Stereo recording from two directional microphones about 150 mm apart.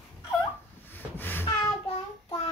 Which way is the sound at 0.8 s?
15° left (ahead or behind).